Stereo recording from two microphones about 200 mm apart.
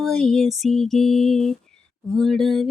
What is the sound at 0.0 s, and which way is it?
Female singing, centre (ahead or behind).